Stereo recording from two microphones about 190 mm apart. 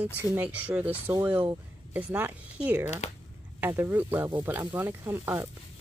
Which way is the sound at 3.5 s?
10° right (ahead or behind).